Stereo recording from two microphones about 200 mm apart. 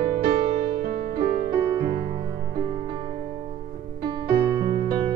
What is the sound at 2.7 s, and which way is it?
Music, 25° right (ahead or behind).